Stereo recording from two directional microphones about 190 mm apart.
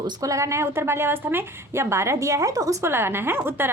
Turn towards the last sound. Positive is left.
turn(degrees=-10)  # may be behind; listen again after turning